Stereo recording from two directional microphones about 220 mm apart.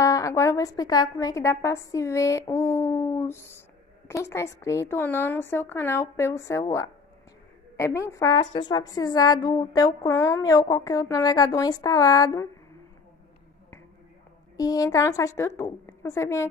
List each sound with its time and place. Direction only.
0.0 s a woman's voice: 15° left (ahead or behind)
14.6 s a woman's voice: 15° left (ahead or behind)